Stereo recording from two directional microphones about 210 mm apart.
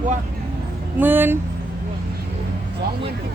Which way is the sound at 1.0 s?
10° right (ahead or behind).